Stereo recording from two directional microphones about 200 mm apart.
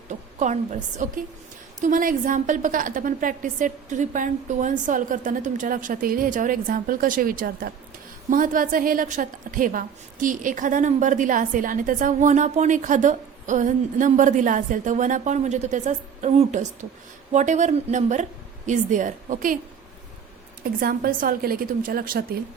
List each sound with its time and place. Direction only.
0.1 s a woman's voice: 35° right (ahead or behind)
20.8 s a woman's voice: 45° right (ahead or behind)